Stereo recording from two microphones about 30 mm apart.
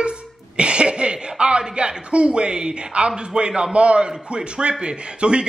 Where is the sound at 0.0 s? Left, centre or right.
Right.